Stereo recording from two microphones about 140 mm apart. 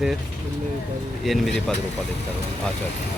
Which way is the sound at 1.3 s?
Centre (ahead or behind).